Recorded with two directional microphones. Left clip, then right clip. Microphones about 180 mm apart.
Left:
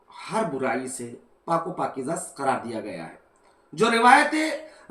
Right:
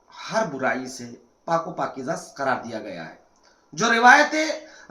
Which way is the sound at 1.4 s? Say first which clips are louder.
Right 1 dB; 5° right (ahead or behind).